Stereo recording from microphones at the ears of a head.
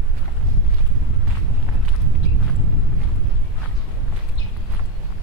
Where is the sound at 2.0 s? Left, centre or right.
Right.